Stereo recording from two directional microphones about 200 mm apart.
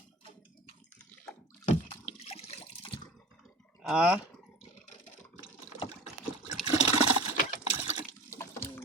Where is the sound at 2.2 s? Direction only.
30° left (ahead or behind).